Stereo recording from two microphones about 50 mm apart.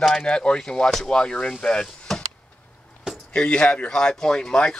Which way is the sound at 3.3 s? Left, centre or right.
Left.